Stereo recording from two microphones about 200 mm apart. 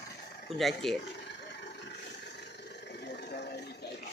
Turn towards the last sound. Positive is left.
turn(degrees=55)  # may be behind; listen again after turning